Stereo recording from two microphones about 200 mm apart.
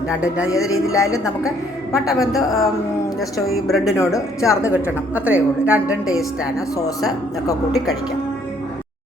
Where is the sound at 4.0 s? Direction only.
15° left (ahead or behind).